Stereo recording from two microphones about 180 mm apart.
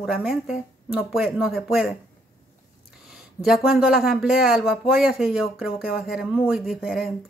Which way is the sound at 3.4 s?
Centre (ahead or behind).